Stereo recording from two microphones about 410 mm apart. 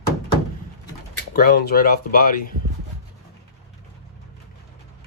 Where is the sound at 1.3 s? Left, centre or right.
Left.